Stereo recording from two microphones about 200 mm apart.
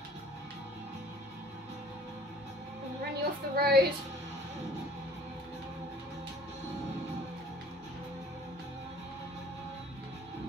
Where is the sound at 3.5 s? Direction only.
50° right (ahead or behind).